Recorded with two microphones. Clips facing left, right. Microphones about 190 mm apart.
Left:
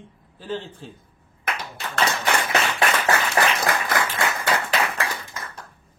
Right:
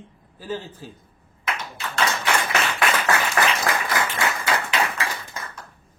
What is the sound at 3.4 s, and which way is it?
Applause, 30° left (ahead or behind).